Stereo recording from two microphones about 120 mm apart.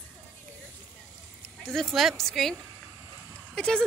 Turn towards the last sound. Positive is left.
turn(degrees=5)  # may be behind; listen again after turning